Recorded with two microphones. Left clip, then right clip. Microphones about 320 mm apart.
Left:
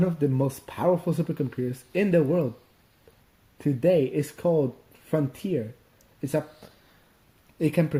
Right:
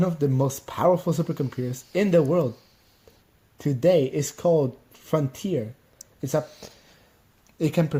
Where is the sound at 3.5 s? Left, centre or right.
Right.